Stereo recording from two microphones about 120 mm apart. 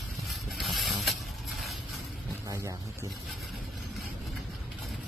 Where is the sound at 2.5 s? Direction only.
25° right (ahead or behind).